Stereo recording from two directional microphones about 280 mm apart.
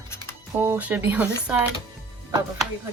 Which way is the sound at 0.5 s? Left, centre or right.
Centre.